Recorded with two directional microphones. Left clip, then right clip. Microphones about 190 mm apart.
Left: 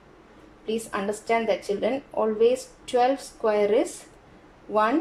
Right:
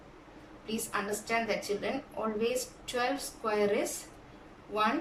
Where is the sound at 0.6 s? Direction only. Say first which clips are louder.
Left 7 dB; 45° left (ahead or behind).